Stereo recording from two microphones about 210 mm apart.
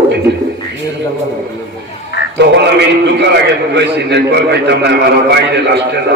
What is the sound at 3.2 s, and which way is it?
A man's voice, 55° right (ahead or behind).